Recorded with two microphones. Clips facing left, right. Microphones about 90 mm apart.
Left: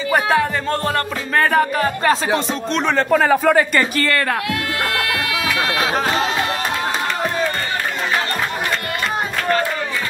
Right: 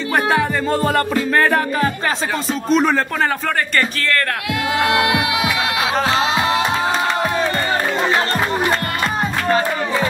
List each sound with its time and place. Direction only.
0.1 s music: centre (ahead or behind)
4.8 s music: 20° right (ahead or behind)
5.9 s music: centre (ahead or behind)